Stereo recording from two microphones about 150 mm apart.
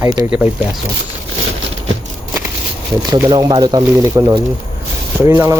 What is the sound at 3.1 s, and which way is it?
Speech, 25° right (ahead or behind).